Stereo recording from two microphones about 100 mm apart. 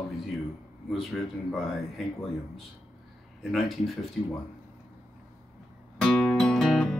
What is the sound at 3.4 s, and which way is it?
Speech, centre (ahead or behind).